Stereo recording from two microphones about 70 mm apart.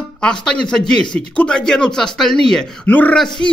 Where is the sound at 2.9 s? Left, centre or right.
Left.